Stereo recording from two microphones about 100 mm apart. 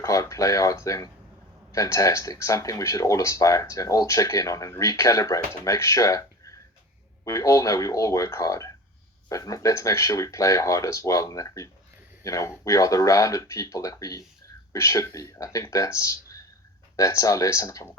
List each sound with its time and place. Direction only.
0.0 s speech: 35° left (ahead or behind)